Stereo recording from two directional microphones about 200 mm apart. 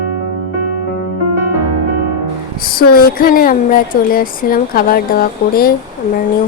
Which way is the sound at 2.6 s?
50° left (ahead or behind).